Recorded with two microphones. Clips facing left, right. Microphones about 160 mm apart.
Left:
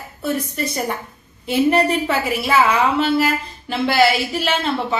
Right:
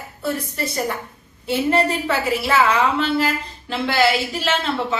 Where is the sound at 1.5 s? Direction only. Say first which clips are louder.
Left 3 dB; 15° left (ahead or behind).